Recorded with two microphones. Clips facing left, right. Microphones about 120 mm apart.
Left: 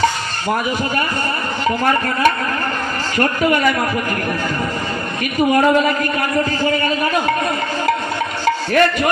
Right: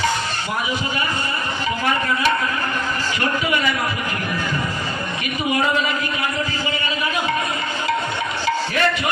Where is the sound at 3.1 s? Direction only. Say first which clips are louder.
Left 7 dB; 50° left (ahead or behind).